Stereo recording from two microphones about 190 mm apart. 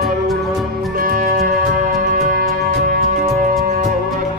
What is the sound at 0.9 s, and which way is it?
Music, 50° right (ahead or behind).